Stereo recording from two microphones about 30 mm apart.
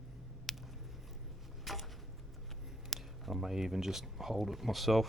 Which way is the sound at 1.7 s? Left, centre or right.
Centre.